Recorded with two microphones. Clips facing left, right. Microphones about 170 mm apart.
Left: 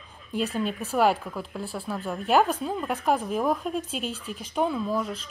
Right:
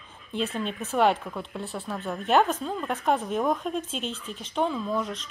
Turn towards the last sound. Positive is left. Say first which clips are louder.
# left 1 dB
turn(degrees=5)  # may be behind; listen again after turning